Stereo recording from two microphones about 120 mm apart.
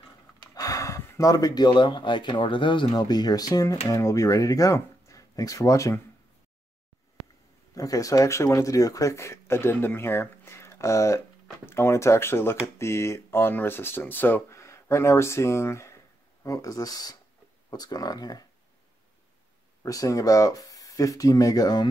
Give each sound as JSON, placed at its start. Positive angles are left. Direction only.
{"t": 0.6, "sound": "speech", "side_deg": 25}
{"t": 7.7, "sound": "speech", "side_deg": 30}
{"t": 19.8, "sound": "speech", "side_deg": 30}